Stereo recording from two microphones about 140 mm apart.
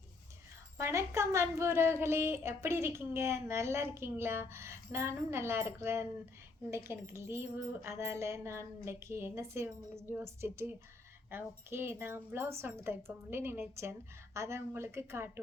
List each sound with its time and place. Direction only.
0.8 s a woman's voice: 20° right (ahead or behind)